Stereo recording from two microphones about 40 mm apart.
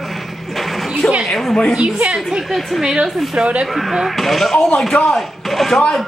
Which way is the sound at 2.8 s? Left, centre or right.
Centre.